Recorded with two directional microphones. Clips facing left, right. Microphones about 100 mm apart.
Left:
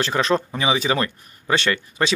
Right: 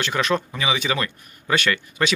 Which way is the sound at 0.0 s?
30° left (ahead or behind).